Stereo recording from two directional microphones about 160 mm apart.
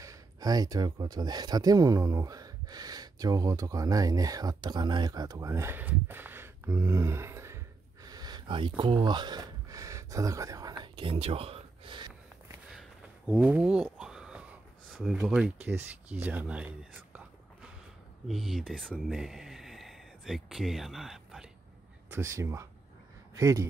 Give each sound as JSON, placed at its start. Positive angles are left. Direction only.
{"t": 0.0, "sound": "speech", "side_deg": -20}
{"t": 13.3, "sound": "a sound", "side_deg": -10}
{"t": 15.7, "sound": "speech", "side_deg": -10}
{"t": 22.1, "sound": "speech", "side_deg": -15}